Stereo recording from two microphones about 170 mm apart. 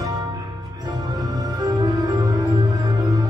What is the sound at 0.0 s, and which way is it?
Music, 20° right (ahead or behind).